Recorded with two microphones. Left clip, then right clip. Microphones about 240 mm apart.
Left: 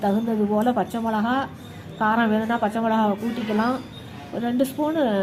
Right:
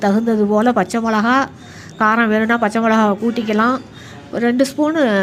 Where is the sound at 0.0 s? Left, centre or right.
Right.